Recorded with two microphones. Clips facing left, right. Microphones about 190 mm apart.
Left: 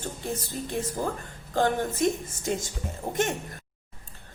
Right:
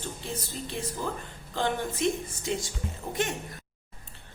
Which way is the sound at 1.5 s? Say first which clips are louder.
Left 4 dB; 45° left (ahead or behind).